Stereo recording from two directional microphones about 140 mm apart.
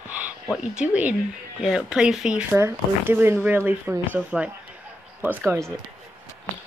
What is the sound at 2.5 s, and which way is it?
Speech, 15° right (ahead or behind).